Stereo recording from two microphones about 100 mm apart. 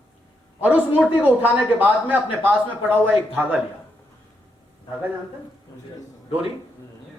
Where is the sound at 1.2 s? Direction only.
15° right (ahead or behind).